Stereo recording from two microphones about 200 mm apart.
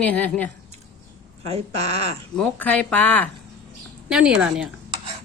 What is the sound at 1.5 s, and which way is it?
Speech, 30° right (ahead or behind).